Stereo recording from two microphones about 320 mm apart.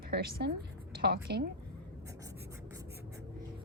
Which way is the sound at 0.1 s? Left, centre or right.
Right.